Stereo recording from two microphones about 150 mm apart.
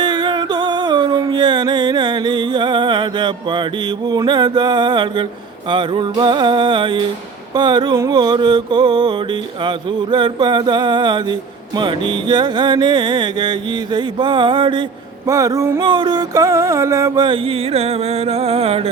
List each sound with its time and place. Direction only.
0.0 s music: 30° right (ahead or behind)